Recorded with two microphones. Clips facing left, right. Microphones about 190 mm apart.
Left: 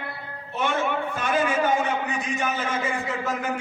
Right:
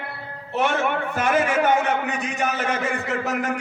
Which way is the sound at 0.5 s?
70° right (ahead or behind).